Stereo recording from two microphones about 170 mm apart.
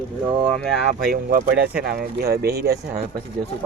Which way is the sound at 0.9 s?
55° right (ahead or behind).